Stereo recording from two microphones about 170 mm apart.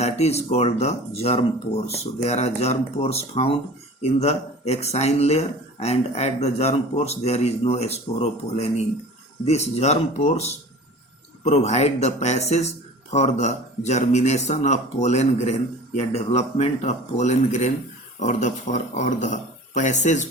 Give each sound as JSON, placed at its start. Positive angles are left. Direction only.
{"t": 0.0, "sound": "speech", "side_deg": 40}